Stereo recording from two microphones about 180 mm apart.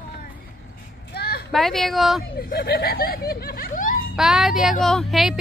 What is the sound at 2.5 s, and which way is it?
Speech, 60° left (ahead or behind).